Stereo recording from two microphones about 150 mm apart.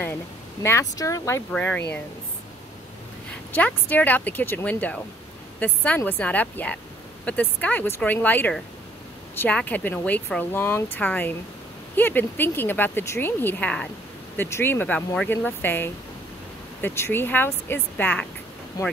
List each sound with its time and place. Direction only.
0.0 s speech: 15° left (ahead or behind)
1.5 s speech: 10° left (ahead or behind)
3.5 s speech: 10° left (ahead or behind)
18.8 s speech: 25° left (ahead or behind)